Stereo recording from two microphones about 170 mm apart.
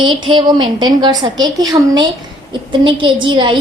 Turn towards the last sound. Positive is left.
turn(degrees=-30)  # may be behind; listen again after turning